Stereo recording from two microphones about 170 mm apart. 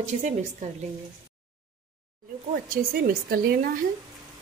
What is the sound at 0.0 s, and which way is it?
Speech, 45° right (ahead or behind).